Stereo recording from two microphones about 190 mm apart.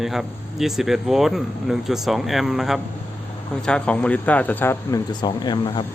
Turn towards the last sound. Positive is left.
turn(degrees=25)  # may be behind; listen again after turning